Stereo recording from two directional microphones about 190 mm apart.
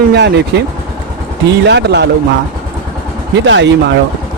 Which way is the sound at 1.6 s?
65° right (ahead or behind).